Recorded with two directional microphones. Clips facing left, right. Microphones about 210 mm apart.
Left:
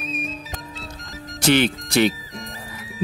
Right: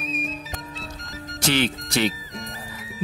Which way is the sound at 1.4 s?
60° left (ahead or behind).